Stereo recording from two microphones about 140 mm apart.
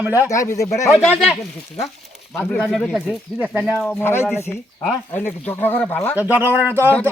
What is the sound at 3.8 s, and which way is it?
Speech, 15° left (ahead or behind).